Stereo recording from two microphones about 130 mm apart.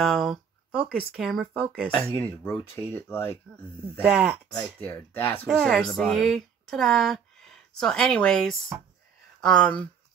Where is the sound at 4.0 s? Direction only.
10° right (ahead or behind).